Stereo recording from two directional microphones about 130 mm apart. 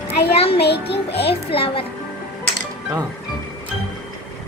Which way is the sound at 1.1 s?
45° left (ahead or behind).